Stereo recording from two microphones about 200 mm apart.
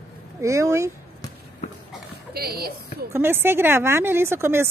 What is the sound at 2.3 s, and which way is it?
Speech, 50° right (ahead or behind).